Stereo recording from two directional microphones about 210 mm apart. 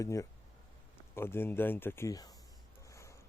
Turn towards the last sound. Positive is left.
turn(degrees=15)  # may be behind; listen again after turning